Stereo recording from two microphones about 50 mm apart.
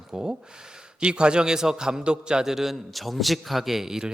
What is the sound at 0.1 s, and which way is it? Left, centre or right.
A man's voice, centre.